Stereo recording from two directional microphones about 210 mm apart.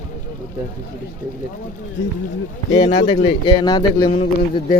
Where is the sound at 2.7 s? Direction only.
20° left (ahead or behind).